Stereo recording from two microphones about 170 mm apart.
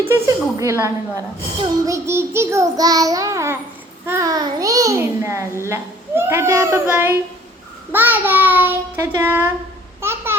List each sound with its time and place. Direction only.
0.6 s child singing: 20° right (ahead or behind)
4.0 s a child's voice: 15° right (ahead or behind)
5.6 s child singing: 15° right (ahead or behind)
10.0 s babbling: 15° right (ahead or behind)